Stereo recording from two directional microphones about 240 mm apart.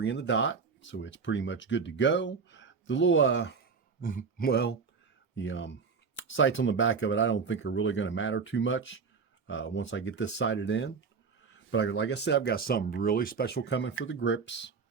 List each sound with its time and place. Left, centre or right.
0.0 s speech: left
4.0 s speech: left